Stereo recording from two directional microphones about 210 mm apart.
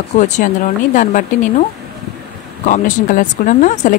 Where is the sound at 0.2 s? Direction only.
40° left (ahead or behind).